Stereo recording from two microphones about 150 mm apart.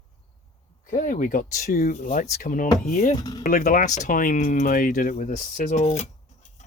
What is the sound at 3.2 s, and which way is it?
Speech, 25° left (ahead or behind).